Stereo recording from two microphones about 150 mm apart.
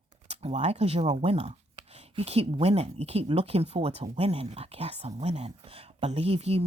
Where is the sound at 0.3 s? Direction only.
45° right (ahead or behind).